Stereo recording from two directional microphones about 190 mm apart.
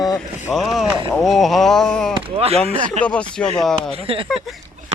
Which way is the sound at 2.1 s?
30° right (ahead or behind).